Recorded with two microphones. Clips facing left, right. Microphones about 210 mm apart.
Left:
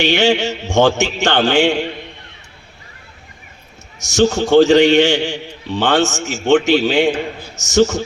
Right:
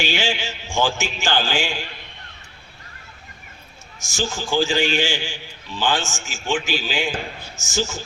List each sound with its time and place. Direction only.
0.0 s a man's voice: 70° left (ahead or behind)
4.1 s a man's voice: 70° left (ahead or behind)